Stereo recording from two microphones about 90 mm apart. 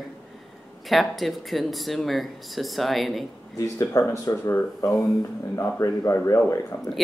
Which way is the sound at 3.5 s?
35° left (ahead or behind).